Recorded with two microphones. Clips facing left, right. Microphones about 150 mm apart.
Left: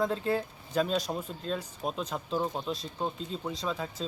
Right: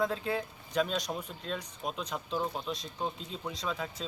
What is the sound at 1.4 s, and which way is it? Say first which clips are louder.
Speech: left 4 dB; centre (ahead or behind).